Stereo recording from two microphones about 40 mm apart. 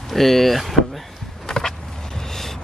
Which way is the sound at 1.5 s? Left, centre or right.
Centre.